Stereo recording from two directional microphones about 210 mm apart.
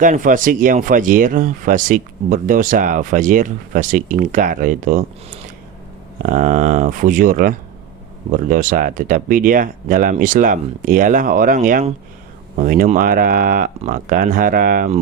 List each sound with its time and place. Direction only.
0.0 s speech: 40° right (ahead or behind)
6.2 s speech: 40° right (ahead or behind)